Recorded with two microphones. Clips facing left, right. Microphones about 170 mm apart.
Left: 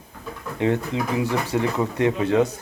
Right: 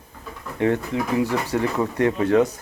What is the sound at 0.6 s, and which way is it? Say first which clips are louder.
Speech: right 1 dB; 20° left (ahead or behind).